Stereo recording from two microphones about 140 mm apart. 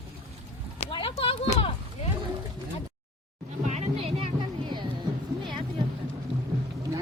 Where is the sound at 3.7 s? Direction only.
50° right (ahead or behind).